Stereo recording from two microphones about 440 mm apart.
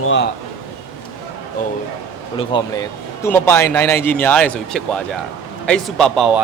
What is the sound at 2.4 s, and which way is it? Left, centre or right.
Speech, centre.